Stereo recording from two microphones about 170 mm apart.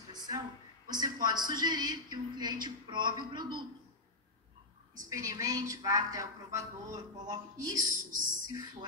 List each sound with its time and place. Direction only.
0.1 s a sound: 25° right (ahead or behind)
0.8 s a man's voice: 25° right (ahead or behind)
4.9 s a man's voice: 20° right (ahead or behind)
7.9 s speech: 50° right (ahead or behind)